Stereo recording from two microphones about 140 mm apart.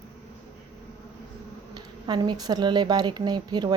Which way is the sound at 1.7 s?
30° right (ahead or behind).